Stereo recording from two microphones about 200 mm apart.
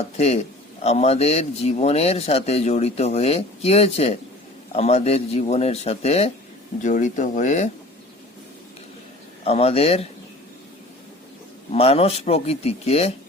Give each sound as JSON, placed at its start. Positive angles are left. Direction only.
{"t": 0.0, "sound": "a man's voice", "side_deg": 30}
{"t": 9.4, "sound": "speech", "side_deg": 30}
{"t": 11.7, "sound": "speech", "side_deg": 30}